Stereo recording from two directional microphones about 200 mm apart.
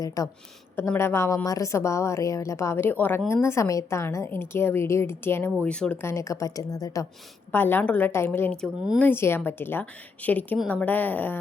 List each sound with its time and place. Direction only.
0.2 s a woman's voice: 15° left (ahead or behind)